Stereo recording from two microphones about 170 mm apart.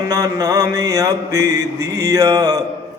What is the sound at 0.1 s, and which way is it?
Mantra, 20° right (ahead or behind).